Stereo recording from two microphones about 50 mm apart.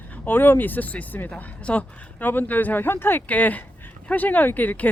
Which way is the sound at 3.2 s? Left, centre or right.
Left.